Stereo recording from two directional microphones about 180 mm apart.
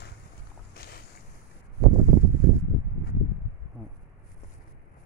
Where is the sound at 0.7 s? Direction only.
60° left (ahead or behind).